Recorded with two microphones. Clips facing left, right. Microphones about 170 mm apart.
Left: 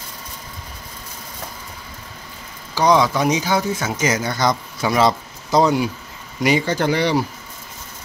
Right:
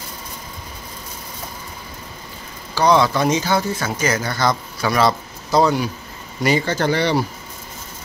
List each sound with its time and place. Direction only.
2.7 s speech: 15° left (ahead or behind)